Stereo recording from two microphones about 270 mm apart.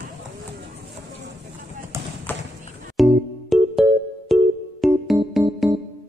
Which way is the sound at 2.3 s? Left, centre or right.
Centre.